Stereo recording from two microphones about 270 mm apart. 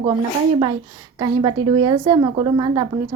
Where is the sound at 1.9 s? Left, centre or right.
Centre.